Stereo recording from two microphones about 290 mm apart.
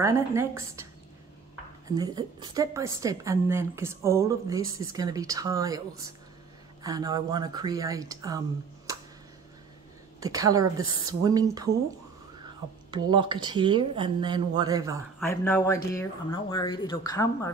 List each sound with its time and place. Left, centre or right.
0.0 s a woman's voice: centre
1.9 s a woman's voice: centre
8.9 s a sound: centre
10.2 s a woman's voice: centre
12.9 s a woman's voice: centre
15.1 s speech: centre